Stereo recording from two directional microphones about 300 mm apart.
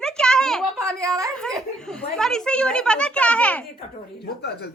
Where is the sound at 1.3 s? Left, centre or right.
Centre.